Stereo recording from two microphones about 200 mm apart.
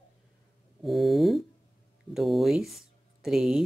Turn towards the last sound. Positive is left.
turn(degrees=0)  # may be behind; listen again after turning